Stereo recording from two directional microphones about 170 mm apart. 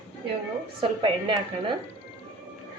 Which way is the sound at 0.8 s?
30° right (ahead or behind).